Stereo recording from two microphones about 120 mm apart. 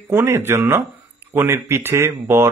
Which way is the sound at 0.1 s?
20° right (ahead or behind).